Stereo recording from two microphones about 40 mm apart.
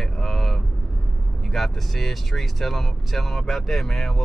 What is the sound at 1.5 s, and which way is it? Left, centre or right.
Speech, centre.